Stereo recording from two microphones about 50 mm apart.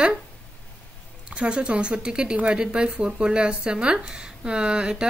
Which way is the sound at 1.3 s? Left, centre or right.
Centre.